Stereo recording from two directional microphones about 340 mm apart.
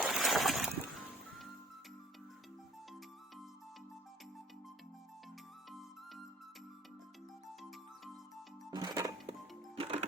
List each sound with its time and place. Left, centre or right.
0.0 s music: centre
8.7 s music: centre